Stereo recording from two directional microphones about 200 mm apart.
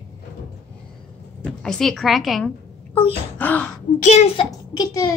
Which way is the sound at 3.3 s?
10° left (ahead or behind).